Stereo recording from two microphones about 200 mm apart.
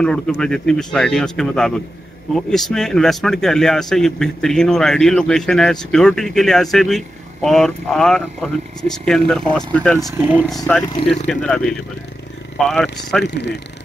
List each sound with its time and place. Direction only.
0.0 s a man's voice: 5° left (ahead or behind)
10.1 s speech: 10° right (ahead or behind)
11.2 s a man's voice: 5° left (ahead or behind)
13.2 s speech: 60° left (ahead or behind)